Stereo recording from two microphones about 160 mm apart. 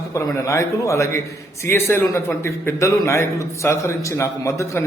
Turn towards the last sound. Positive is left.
turn(degrees=20)  # may be behind; listen again after turning